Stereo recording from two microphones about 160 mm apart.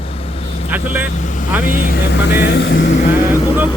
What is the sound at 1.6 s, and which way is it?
Speech, 65° left (ahead or behind).